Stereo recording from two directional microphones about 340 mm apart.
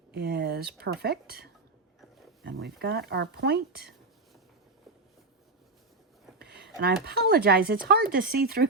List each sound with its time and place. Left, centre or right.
0.1 s speech: right
6.4 s speech: right